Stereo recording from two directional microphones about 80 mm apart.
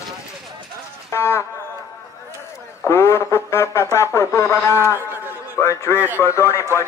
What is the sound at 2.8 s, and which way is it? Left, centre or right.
Radio, left.